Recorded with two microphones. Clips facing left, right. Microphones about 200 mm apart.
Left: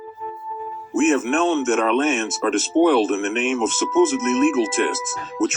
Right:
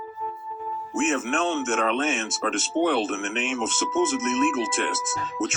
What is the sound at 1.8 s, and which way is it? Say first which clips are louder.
Speech: left 6 dB; 55° left (ahead or behind).